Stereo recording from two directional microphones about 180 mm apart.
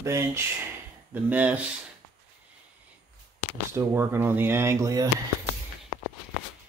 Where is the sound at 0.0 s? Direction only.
15° right (ahead or behind).